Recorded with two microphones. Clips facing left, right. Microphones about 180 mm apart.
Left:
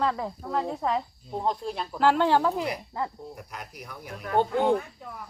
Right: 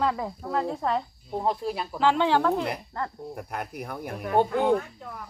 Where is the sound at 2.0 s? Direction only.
10° left (ahead or behind).